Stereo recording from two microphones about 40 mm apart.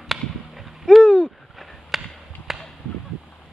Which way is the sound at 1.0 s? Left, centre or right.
Left.